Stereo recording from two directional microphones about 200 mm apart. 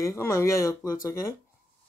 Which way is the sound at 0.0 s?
15° left (ahead or behind).